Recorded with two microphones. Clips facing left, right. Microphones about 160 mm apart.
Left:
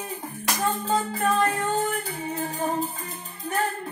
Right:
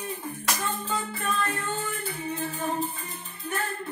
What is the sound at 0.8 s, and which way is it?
Music, 40° left (ahead or behind).